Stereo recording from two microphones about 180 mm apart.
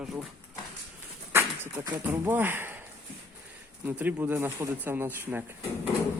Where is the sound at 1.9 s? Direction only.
15° right (ahead or behind).